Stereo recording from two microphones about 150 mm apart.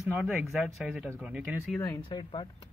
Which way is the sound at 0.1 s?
5° right (ahead or behind).